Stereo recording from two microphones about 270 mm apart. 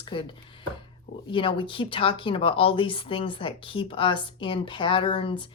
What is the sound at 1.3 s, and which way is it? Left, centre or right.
Speech, centre.